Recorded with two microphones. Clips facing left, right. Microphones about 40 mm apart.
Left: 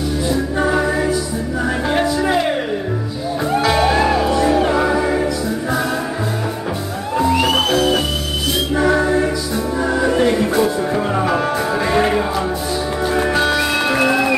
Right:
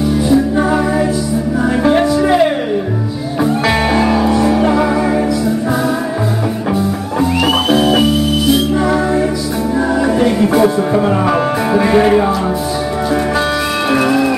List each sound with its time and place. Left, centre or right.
0.6 s music: centre
3.6 s music: right
4.6 s music: centre
10.5 s music: centre